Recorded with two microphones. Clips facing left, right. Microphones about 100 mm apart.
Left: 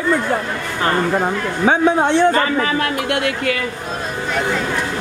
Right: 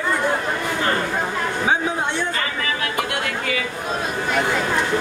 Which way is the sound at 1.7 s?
70° left (ahead or behind).